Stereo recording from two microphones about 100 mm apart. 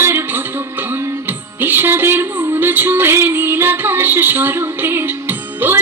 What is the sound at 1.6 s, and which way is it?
Music, 20° right (ahead or behind).